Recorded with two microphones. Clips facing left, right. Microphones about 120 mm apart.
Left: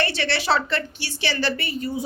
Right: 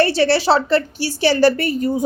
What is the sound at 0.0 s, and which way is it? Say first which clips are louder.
A woman's voice: right 10 dB; 35° right (ahead or behind).